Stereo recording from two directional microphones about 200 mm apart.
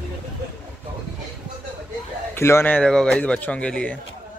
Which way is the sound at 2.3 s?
10° left (ahead or behind).